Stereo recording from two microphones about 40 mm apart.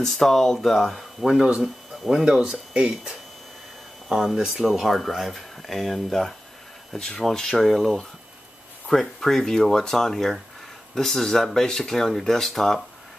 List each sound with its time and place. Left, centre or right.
0.0 s speech: centre
1.2 s speech: centre
2.2 s speech: centre
4.4 s speech: centre
7.6 s speech: centre